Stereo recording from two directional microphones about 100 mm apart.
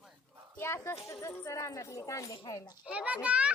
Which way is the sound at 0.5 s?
25° left (ahead or behind).